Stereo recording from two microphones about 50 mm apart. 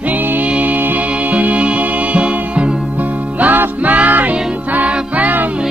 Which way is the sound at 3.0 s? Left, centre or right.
Right.